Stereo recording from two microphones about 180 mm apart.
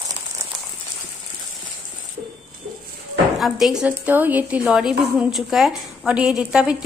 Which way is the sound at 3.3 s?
Centre (ahead or behind).